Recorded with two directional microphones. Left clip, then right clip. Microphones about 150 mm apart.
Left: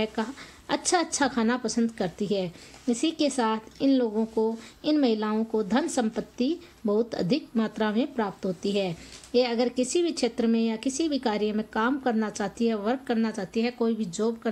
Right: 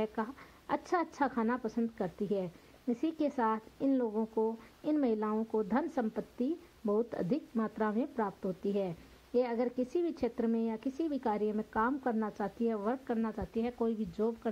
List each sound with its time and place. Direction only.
0.0 s a woman's voice: 20° left (ahead or behind); by 14.5 s centre (ahead or behind)